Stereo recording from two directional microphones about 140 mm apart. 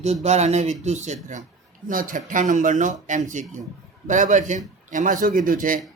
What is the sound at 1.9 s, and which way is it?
Speech, 75° right (ahead or behind).